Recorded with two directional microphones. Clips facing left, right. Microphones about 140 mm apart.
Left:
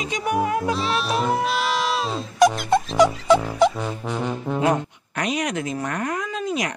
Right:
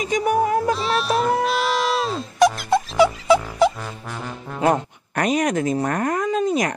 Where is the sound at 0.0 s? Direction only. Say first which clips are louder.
Right 4 dB; 45° right (ahead or behind).